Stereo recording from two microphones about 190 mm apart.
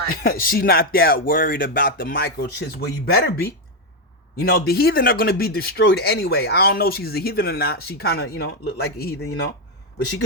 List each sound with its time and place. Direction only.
0.1 s speech: 50° left (ahead or behind)